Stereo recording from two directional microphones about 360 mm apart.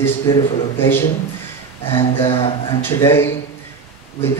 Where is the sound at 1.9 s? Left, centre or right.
Centre.